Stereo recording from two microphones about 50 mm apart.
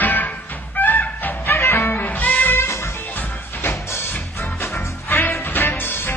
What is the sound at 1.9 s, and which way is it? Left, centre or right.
Music, left.